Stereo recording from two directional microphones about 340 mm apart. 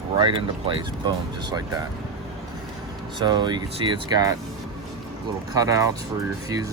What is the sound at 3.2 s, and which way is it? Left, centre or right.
Speech, centre.